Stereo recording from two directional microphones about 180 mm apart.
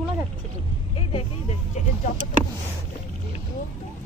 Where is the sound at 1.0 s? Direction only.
35° left (ahead or behind).